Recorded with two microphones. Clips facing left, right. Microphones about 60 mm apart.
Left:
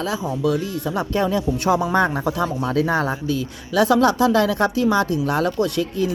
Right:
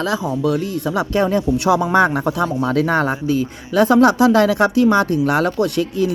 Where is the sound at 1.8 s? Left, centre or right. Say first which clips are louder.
Right 4 dB; right.